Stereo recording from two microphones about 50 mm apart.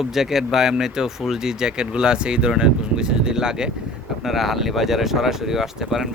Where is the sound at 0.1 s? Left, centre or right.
Centre.